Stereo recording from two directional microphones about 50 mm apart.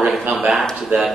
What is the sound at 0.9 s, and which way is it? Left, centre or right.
Speech, right.